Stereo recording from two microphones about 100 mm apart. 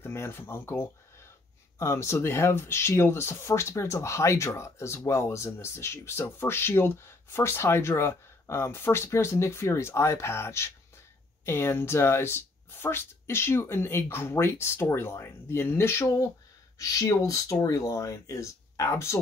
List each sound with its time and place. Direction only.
0.0 s speech: 25° left (ahead or behind)